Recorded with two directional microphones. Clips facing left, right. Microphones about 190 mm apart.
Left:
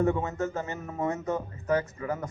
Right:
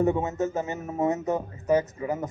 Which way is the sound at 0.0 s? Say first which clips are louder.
Right 3 dB; 20° right (ahead or behind).